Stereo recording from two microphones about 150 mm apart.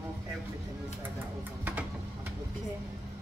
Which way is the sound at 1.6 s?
10° right (ahead or behind).